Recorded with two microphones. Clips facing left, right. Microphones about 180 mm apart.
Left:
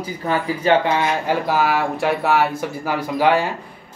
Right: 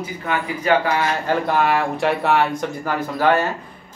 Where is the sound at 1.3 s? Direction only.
5° left (ahead or behind).